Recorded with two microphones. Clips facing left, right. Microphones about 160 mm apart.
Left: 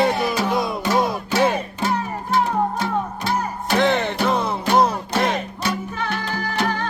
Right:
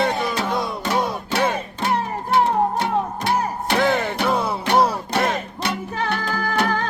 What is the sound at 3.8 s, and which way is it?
Music, 5° right (ahead or behind).